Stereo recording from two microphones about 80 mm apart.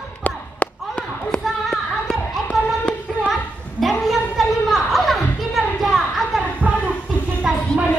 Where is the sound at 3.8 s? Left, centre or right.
Centre.